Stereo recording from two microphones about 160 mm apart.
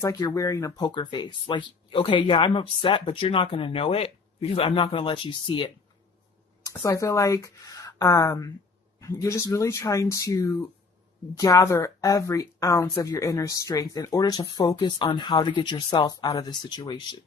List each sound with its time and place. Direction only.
0.0 s speech: 20° left (ahead or behind)
6.7 s speech: 20° left (ahead or behind)